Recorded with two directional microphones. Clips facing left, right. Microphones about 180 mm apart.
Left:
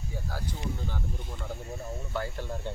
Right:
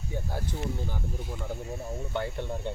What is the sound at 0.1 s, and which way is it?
Speech, 20° right (ahead or behind).